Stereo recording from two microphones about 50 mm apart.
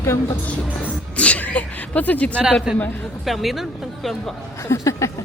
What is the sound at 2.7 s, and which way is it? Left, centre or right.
Speech, centre.